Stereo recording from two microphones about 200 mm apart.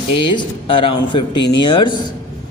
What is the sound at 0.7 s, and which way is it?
Speech, 25° left (ahead or behind).